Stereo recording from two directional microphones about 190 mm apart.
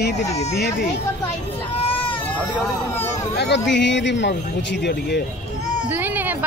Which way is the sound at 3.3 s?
60° left (ahead or behind).